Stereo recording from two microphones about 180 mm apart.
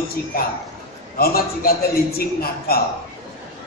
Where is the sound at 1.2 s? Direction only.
55° left (ahead or behind).